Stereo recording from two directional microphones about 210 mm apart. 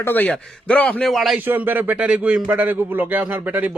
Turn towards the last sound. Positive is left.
turn(degrees=-5)  # may be behind; listen again after turning